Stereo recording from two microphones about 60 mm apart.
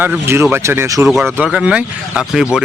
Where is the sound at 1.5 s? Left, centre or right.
Centre.